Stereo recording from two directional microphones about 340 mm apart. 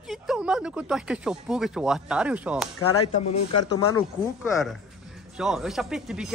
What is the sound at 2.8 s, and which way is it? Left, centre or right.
Speech, left.